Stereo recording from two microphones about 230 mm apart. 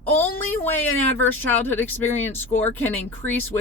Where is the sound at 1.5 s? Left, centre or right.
Centre.